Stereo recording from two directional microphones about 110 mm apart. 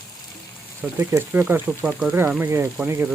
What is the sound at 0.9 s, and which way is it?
Speech, 20° right (ahead or behind).